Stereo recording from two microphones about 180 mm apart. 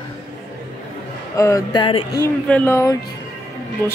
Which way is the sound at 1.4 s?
20° left (ahead or behind).